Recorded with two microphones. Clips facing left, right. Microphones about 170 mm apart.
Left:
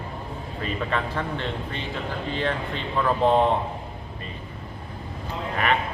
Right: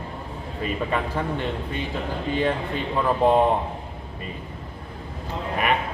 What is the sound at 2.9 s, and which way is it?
Speech, 15° right (ahead or behind).